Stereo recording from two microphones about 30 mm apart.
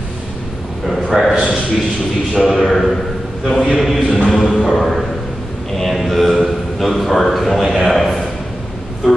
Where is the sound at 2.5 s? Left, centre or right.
Centre.